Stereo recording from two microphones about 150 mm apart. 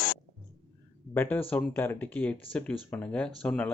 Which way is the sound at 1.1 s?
10° left (ahead or behind).